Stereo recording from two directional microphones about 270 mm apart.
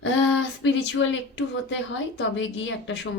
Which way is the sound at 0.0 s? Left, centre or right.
Left.